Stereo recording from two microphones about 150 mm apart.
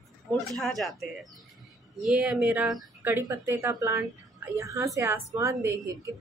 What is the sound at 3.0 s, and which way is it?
A woman's voice, 15° right (ahead or behind).